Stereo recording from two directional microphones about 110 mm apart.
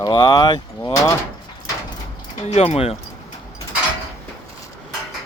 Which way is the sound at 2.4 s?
80° left.